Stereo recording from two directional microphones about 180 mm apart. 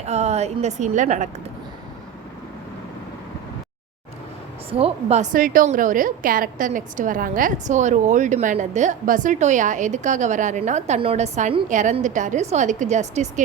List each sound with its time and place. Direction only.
0.0 s a woman's voice: 35° right (ahead or behind)
4.7 s a woman's voice: 35° right (ahead or behind)